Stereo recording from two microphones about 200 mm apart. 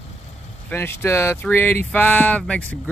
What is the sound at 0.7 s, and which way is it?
Speech, 10° left (ahead or behind).